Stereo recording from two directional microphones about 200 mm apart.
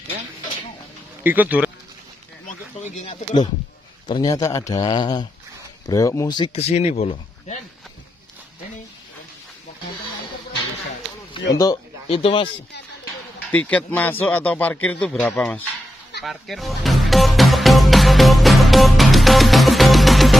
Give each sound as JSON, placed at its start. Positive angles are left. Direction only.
{"t": 1.2, "sound": "speech", "side_deg": -10}
{"t": 2.4, "sound": "a sound", "side_deg": 35}
{"t": 4.1, "sound": "speech", "side_deg": 15}
{"t": 11.5, "sound": "speech", "side_deg": 20}
{"t": 13.5, "sound": "speech", "side_deg": 5}
{"t": 16.2, "sound": "music", "side_deg": 0}